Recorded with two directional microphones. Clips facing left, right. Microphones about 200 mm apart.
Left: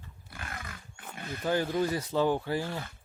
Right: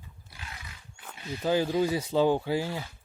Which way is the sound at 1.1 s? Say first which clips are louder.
Right 2 dB; 50° left (ahead or behind).